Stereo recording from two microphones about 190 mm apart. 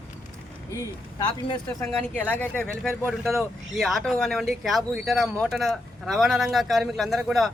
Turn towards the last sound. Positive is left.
turn(degrees=0)  # may be behind; listen again after turning